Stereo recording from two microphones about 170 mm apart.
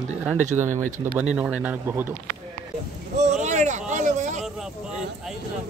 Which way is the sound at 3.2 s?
45° right (ahead or behind).